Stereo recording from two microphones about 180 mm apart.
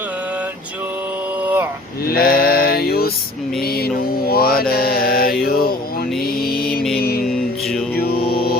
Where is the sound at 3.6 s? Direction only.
60° left (ahead or behind).